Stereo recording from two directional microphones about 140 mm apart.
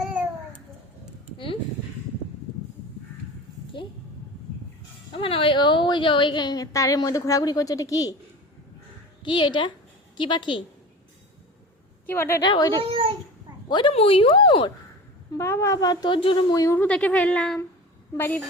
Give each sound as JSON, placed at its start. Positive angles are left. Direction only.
{"t": 0.0, "sound": "babbling", "side_deg": -10}
{"t": 5.1, "sound": "a woman's voice", "side_deg": 40}
{"t": 9.2, "sound": "speech", "side_deg": 35}
{"t": 12.0, "sound": "speech", "side_deg": 15}
{"t": 12.4, "sound": "speech", "side_deg": 30}
{"t": 12.9, "sound": "a sound", "side_deg": -40}
{"t": 13.7, "sound": "speech", "side_deg": 35}
{"t": 15.3, "sound": "a woman's voice", "side_deg": 20}
{"t": 16.6, "sound": "speech", "side_deg": 15}